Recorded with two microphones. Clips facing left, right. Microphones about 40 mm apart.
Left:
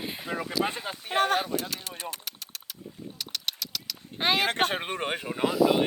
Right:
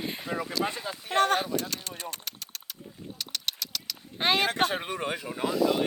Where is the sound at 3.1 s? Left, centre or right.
Centre.